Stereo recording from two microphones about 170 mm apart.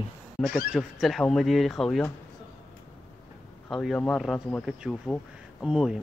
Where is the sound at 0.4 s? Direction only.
5° left (ahead or behind).